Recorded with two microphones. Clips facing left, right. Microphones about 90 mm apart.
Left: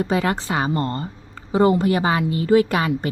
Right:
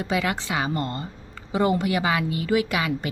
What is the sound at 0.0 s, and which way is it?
A woman's voice, 35° left (ahead or behind).